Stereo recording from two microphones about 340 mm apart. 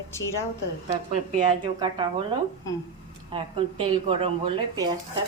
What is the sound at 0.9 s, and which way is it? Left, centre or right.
Speech, centre.